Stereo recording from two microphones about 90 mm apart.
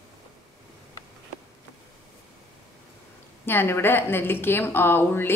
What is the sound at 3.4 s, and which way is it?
A woman's voice, 25° left (ahead or behind).